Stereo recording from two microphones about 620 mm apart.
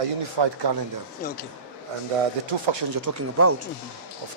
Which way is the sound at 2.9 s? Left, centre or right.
Right.